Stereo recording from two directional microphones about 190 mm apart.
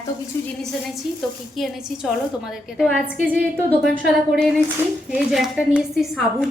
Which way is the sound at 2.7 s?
Centre (ahead or behind).